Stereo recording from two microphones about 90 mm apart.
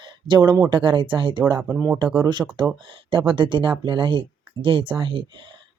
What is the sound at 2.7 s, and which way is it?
Speech, 70° right (ahead or behind).